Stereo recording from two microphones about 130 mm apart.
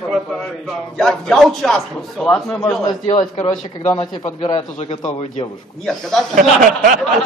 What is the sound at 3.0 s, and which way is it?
Speech, 70° left (ahead or behind).